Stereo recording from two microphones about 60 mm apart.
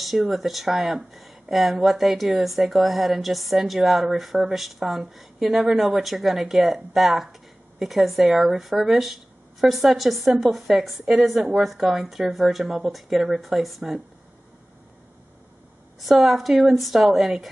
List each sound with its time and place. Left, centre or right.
0.0 s speech: centre
16.0 s speech: centre